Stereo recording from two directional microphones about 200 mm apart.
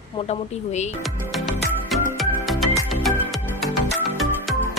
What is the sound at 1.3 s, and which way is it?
Music, centre (ahead or behind).